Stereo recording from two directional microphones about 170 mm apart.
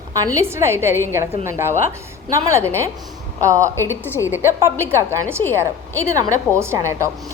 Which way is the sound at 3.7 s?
15° left (ahead or behind).